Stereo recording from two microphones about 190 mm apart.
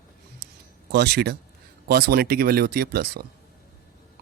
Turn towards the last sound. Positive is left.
turn(degrees=-55)  # may be behind; listen again after turning